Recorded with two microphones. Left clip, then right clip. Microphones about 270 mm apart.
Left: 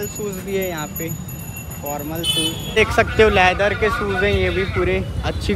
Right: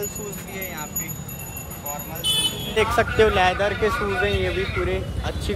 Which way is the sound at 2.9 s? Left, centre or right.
Centre.